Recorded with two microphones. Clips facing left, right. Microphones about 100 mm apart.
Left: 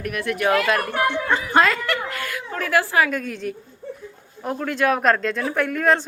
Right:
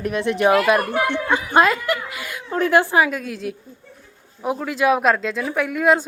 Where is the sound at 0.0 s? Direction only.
25° right (ahead or behind).